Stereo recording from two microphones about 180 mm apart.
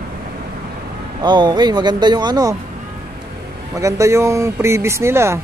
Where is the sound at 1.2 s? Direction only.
25° right (ahead or behind).